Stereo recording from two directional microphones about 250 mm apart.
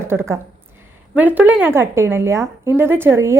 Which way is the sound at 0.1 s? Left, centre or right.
Centre.